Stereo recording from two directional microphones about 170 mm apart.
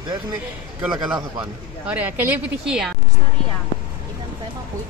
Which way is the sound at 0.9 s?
25° right (ahead or behind).